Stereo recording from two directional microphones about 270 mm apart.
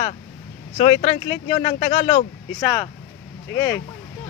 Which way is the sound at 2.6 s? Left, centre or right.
Centre.